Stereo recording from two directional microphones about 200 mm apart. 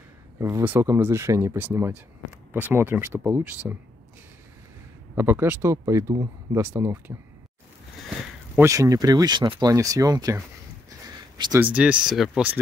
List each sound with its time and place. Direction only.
0.4 s speech: 15° right (ahead or behind)
5.1 s speech: 10° right (ahead or behind)
8.5 s speech: 15° right (ahead or behind)
11.6 s speech: 5° right (ahead or behind)